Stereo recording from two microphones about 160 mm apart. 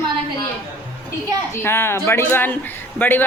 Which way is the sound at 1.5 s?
15° left (ahead or behind).